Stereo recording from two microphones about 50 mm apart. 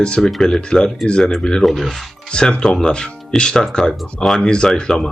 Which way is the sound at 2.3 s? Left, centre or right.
Centre.